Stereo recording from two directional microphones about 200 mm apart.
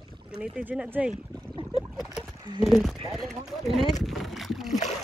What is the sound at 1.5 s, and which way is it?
Boat, 25° right (ahead or behind).